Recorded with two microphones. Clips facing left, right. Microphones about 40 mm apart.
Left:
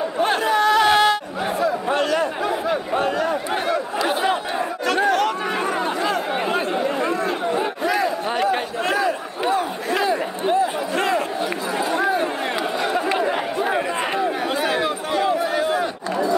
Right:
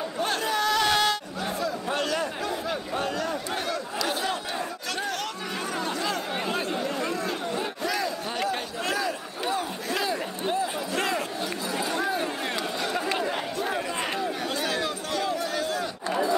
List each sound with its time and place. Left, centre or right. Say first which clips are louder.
0.2 s chatter: left 8 dB; left